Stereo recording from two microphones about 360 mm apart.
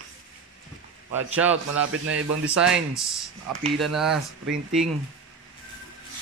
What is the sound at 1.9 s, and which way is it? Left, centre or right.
Speech, right.